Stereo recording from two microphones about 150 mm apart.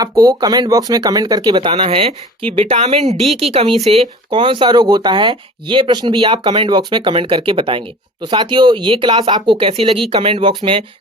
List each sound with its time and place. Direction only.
0.0 s speech: 25° right (ahead or behind)